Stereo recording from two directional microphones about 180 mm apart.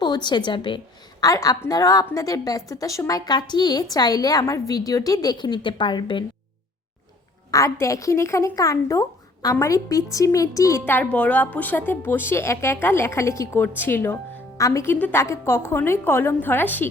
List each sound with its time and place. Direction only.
0.0 s a woman's voice: 25° left (ahead or behind)
7.5 s a woman's voice: 15° left (ahead or behind)